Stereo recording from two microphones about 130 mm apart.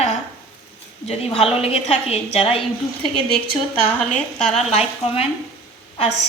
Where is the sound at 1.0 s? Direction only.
45° left (ahead or behind).